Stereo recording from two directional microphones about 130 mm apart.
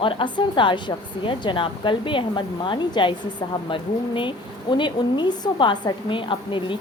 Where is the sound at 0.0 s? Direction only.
40° left (ahead or behind).